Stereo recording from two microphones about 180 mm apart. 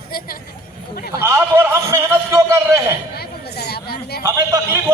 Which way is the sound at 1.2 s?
10° right (ahead or behind).